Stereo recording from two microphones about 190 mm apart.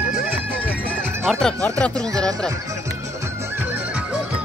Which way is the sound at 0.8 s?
5° left (ahead or behind).